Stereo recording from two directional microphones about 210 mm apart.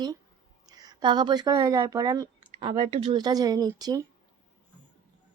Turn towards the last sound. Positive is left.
turn(degrees=-20)  # may be behind; listen again after turning